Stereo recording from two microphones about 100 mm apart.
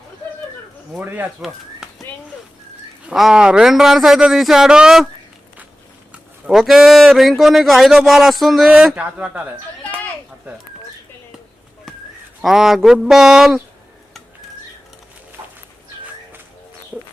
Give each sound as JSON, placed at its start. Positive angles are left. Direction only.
{"t": 0.9, "sound": "speech", "side_deg": -20}
{"t": 3.1, "sound": "speech", "side_deg": -5}
{"t": 6.1, "sound": "speech", "side_deg": 0}
{"t": 12.4, "sound": "speech", "side_deg": -5}
{"t": 15.4, "sound": "dog", "side_deg": -25}